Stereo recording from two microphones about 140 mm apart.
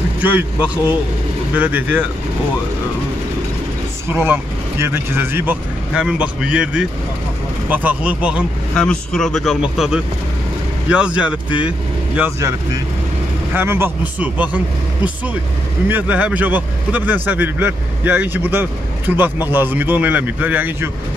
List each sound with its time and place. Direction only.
0.2 s a man's voice: 10° right (ahead or behind)
4.1 s a man's voice: 15° right (ahead or behind)
8.7 s a man's voice: 5° left (ahead or behind)
12.2 s speech: 20° right (ahead or behind)
13.6 s a man's voice: 15° right (ahead or behind)
15.9 s a man's voice: 10° right (ahead or behind)